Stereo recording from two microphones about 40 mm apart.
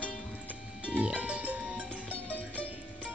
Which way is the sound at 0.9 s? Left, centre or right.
Right.